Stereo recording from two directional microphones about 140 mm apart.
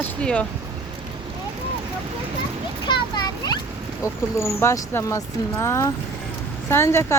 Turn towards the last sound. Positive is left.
turn(degrees=20)  # may be behind; listen again after turning